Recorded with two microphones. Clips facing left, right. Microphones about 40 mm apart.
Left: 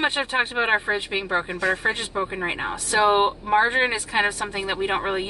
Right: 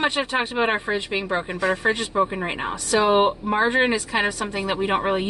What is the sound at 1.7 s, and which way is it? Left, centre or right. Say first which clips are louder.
Speech: right 5 dB; centre.